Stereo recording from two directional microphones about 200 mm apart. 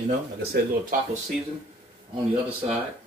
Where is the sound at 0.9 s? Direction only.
40° right (ahead or behind).